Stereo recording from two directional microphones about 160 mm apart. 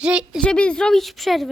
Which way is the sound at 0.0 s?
5° right (ahead or behind).